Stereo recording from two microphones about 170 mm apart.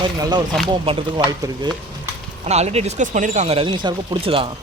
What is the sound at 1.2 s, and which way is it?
Speech, 25° right (ahead or behind).